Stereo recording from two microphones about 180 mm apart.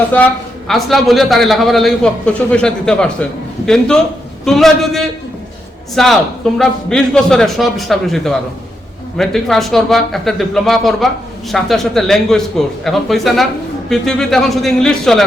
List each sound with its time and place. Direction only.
0.7 s speech: centre (ahead or behind)
4.4 s speech: centre (ahead or behind)